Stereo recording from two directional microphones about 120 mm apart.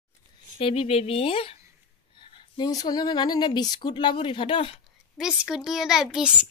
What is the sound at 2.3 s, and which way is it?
Speech, 40° left (ahead or behind).